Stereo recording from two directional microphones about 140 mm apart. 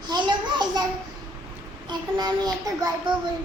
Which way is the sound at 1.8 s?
30° right (ahead or behind).